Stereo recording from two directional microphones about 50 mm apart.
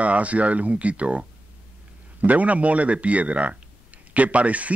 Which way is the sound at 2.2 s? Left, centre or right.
Right.